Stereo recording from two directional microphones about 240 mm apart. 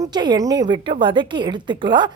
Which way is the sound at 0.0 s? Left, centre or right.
Centre.